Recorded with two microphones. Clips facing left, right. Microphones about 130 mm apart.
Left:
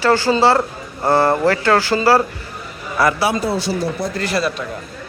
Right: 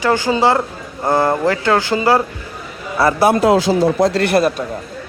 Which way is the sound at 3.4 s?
90° right.